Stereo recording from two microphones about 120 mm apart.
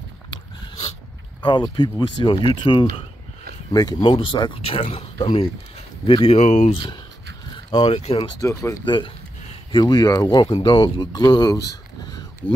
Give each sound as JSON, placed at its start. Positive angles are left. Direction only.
{"t": 1.4, "sound": "speech", "side_deg": 40}
{"t": 6.4, "sound": "speech", "side_deg": 85}
{"t": 6.7, "sound": "speech", "side_deg": 45}
{"t": 7.5, "sound": "a sound", "side_deg": 45}
{"t": 7.9, "sound": "speech", "side_deg": 60}
{"t": 8.2, "sound": "speech", "side_deg": 25}
{"t": 8.8, "sound": "speech", "side_deg": 40}
{"t": 12.1, "sound": "a sound", "side_deg": 30}